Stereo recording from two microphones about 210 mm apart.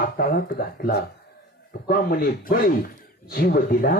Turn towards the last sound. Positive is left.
turn(degrees=45)  # may be behind; listen again after turning